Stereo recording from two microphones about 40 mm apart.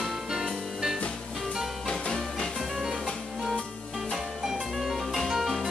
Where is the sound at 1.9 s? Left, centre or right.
Centre.